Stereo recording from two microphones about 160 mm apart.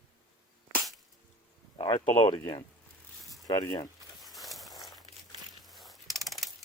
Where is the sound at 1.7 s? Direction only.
35° left (ahead or behind).